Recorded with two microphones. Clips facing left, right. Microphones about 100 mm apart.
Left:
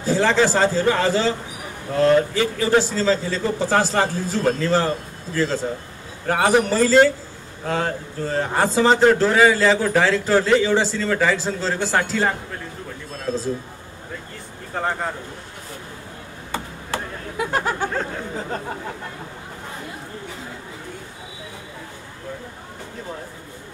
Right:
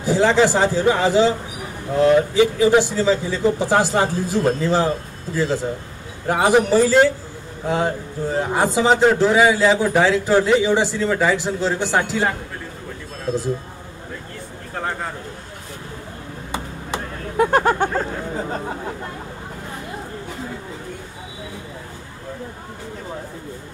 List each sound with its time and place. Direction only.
0.0 s a man's voice: 15° right (ahead or behind)
13.3 s a man's voice: 15° right (ahead or behind)
14.7 s speech: centre (ahead or behind)
17.4 s speech: 45° right (ahead or behind)